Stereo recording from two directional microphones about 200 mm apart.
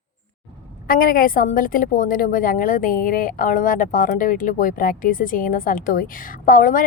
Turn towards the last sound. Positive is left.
turn(degrees=40)  # may be behind; listen again after turning